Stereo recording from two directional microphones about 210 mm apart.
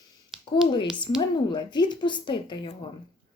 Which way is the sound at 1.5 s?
20° left (ahead or behind).